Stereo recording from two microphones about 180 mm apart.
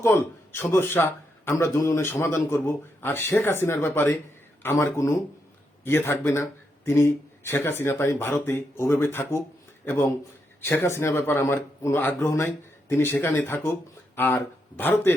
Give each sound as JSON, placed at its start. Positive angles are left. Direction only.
{"t": 0.0, "sound": "a man's voice", "side_deg": 10}